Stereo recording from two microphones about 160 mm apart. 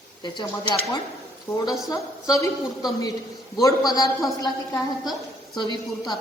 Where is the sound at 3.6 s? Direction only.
25° left (ahead or behind).